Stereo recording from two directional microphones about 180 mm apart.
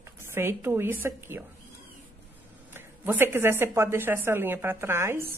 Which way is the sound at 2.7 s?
10° right (ahead or behind).